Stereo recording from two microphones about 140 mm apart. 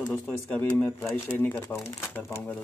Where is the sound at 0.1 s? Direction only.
10° left (ahead or behind).